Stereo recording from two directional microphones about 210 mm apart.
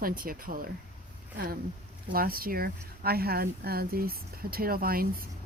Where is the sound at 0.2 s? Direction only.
40° right (ahead or behind).